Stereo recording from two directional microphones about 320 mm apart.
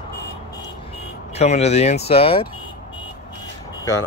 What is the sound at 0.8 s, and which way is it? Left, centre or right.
Speech, centre.